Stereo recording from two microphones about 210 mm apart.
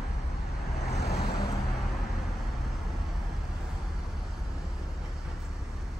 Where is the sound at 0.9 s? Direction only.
50° left (ahead or behind).